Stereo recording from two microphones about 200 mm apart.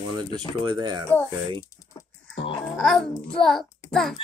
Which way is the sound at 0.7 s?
20° right (ahead or behind).